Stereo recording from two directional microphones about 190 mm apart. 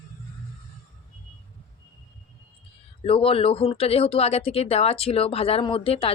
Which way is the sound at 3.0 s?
30° left (ahead or behind).